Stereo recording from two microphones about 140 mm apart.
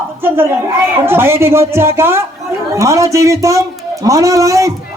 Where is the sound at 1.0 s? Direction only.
15° right (ahead or behind).